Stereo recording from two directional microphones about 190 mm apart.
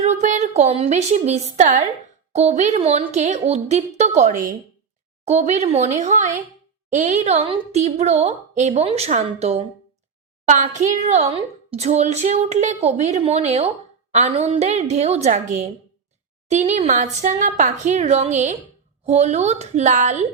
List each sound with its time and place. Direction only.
0.0 s a woman's voice: 35° right (ahead or behind)